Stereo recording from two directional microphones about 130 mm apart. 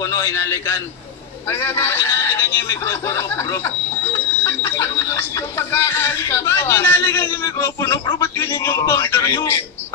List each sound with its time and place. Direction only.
0.0 s speech: 25° left (ahead or behind)